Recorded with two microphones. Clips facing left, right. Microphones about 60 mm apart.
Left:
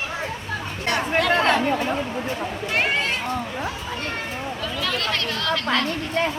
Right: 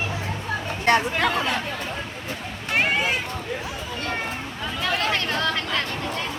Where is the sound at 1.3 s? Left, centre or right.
Left.